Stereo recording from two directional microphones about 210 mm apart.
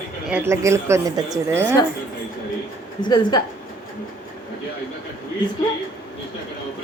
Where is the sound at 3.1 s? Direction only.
20° left (ahead or behind).